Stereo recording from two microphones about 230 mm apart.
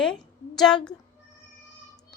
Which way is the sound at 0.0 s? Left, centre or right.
Centre.